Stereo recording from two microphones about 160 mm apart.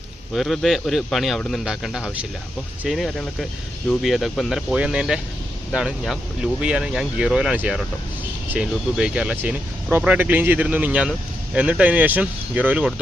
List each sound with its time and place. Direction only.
0.3 s speech: centre (ahead or behind)